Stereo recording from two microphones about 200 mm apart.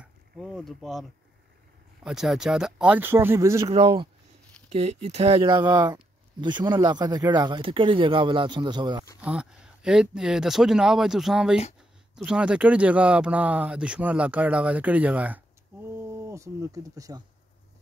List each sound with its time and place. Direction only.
0.0 s a sound: centre (ahead or behind)
2.0 s speech: centre (ahead or behind)
3.7 s speech: 25° right (ahead or behind)
9.2 s speech: 5° right (ahead or behind)